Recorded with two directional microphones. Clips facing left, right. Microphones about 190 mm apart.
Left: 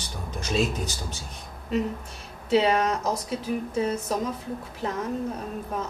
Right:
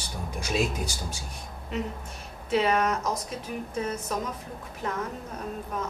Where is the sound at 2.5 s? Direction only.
30° left (ahead or behind).